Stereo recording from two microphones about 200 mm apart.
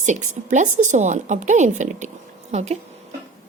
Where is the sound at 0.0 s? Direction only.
40° right (ahead or behind).